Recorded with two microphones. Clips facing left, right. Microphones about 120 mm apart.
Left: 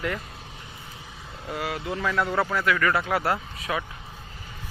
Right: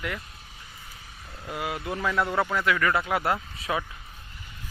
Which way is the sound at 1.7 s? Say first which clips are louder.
Left 1 dB; 25° left (ahead or behind).